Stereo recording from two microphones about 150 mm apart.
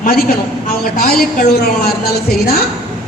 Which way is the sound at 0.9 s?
85° left.